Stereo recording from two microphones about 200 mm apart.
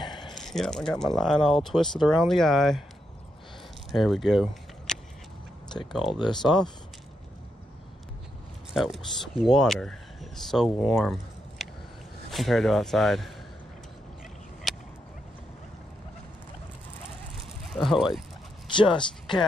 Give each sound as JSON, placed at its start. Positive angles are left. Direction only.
{"t": 0.0, "sound": "a sound", "side_deg": 20}
{"t": 0.3, "sound": "speech", "side_deg": 0}
{"t": 3.9, "sound": "speech", "side_deg": 0}
{"t": 5.7, "sound": "speech", "side_deg": 20}
{"t": 8.7, "sound": "speech", "side_deg": 0}
{"t": 14.7, "sound": "a sound", "side_deg": 0}
{"t": 17.6, "sound": "speech", "side_deg": 0}
{"t": 18.8, "sound": "speech", "side_deg": 25}